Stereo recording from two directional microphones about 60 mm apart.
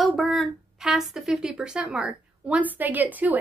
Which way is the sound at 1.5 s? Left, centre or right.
Centre.